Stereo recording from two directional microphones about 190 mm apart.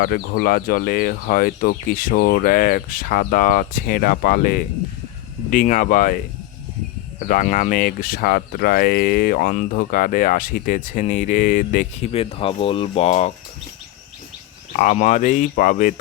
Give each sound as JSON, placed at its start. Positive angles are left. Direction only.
{"t": 0.0, "sound": "speech", "side_deg": 50}
{"t": 14.8, "sound": "speech", "side_deg": 40}